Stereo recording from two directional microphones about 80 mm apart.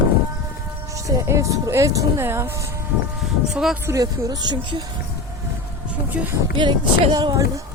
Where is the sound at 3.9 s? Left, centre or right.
Right.